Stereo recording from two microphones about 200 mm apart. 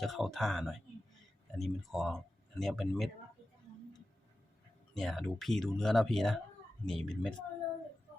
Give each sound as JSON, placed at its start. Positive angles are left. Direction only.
{"t": 0.0, "sound": "speech", "side_deg": 0}
{"t": 4.9, "sound": "speech", "side_deg": 0}